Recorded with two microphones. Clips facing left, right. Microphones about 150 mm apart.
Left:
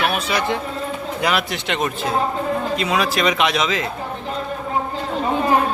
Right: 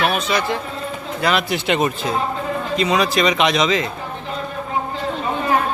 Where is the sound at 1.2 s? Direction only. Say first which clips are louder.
Right 2 dB; 5° left (ahead or behind).